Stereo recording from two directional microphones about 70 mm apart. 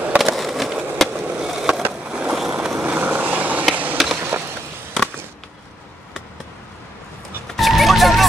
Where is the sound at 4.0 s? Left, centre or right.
Centre.